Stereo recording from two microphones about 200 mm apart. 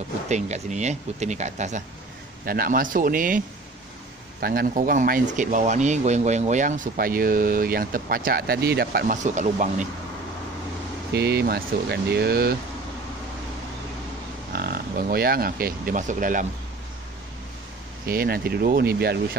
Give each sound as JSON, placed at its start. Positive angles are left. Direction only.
{"t": 0.3, "sound": "speech", "side_deg": -35}
{"t": 2.4, "sound": "speech", "side_deg": -45}
{"t": 11.1, "sound": "speech", "side_deg": -55}
{"t": 14.5, "sound": "speech", "side_deg": -50}
{"t": 18.0, "sound": "speech", "side_deg": -50}